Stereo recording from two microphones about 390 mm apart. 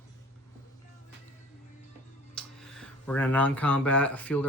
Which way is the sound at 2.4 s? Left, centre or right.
Centre.